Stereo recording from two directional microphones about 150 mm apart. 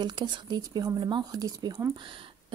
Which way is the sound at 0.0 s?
30° right (ahead or behind).